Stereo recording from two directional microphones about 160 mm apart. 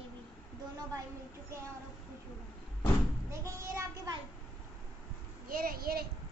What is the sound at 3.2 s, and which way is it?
Child singing, 20° right (ahead or behind).